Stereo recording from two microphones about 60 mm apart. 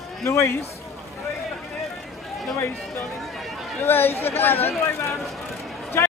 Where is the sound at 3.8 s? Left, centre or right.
Left.